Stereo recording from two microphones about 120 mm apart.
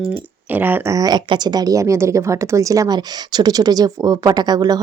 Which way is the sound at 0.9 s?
30° right (ahead or behind).